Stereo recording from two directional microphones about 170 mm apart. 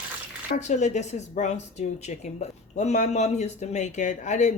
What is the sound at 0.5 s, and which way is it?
A woman's voice, 45° left (ahead or behind).